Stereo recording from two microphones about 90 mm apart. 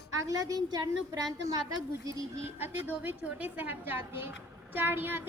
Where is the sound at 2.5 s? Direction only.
25° right (ahead or behind).